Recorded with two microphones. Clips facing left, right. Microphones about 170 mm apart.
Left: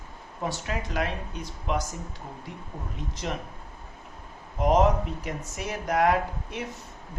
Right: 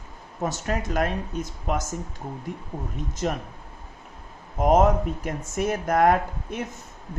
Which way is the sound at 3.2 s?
45° right (ahead or behind).